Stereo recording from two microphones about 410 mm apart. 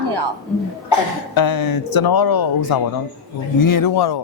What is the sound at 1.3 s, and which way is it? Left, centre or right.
A man's voice, left.